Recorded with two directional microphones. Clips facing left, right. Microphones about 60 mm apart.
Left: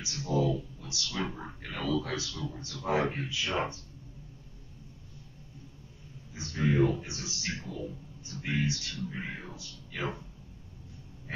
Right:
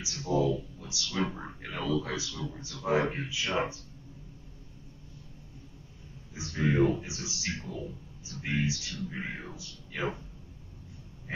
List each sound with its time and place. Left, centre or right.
0.1 s speech: centre
6.3 s speech: centre
11.3 s a sound: centre